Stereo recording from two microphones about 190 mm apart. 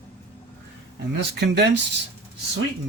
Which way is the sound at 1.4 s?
60° right (ahead or behind).